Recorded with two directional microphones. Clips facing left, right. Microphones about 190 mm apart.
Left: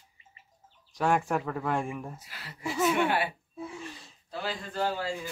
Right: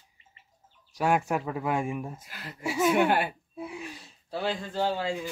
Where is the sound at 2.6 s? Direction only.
10° right (ahead or behind).